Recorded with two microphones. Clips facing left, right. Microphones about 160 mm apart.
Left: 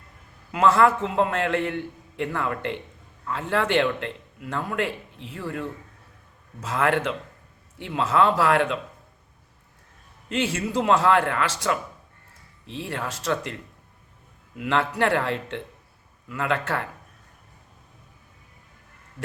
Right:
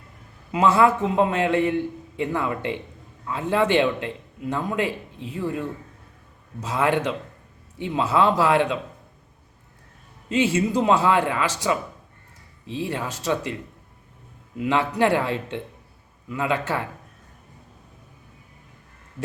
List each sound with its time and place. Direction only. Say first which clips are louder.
0.5 s a man's voice: right 1 dB; 10° right (ahead or behind)
10.3 s a man's voice: right 4 dB; 10° right (ahead or behind)
14.6 s a man's voice: right 2 dB; 10° right (ahead or behind)